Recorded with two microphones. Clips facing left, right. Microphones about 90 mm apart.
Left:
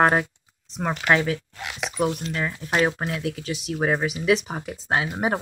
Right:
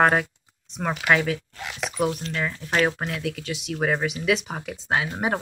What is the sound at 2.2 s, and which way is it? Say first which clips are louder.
Speech: left 1 dB; 15° left (ahead or behind).